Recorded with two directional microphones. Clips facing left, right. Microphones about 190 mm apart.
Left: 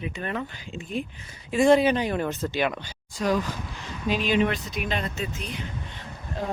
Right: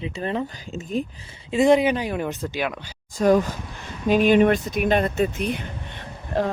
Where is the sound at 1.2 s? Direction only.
20° right (ahead or behind).